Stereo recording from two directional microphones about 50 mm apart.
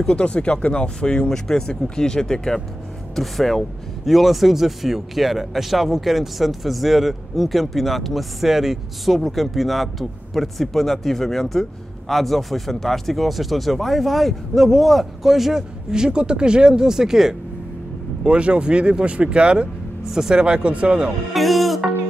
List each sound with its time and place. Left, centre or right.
0.0 s speech: left; by 17.4 s centre
18.2 s speech: right
20.1 s speech: centre
21.3 s music: centre